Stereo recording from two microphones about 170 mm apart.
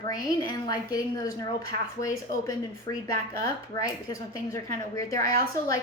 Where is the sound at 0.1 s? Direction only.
20° left (ahead or behind).